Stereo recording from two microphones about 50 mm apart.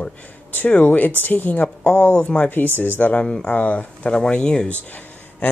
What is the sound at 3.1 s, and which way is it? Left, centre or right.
Speech, left.